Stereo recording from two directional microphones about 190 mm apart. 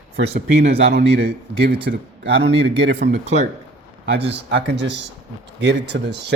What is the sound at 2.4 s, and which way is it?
A man's voice, 30° right (ahead or behind).